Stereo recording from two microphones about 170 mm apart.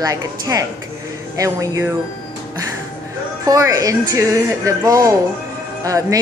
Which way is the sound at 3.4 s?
20° right (ahead or behind).